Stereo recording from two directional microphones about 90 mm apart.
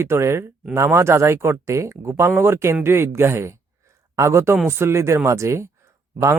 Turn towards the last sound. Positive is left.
turn(degrees=-35)  # may be behind; listen again after turning